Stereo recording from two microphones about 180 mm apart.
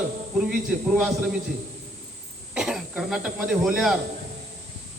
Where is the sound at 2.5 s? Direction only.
Centre (ahead or behind).